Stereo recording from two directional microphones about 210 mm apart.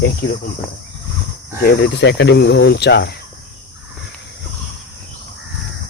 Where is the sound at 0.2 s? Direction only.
60° left (ahead or behind).